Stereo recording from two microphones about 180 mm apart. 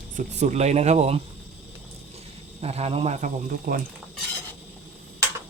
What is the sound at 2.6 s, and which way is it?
Speech, 35° right (ahead or behind).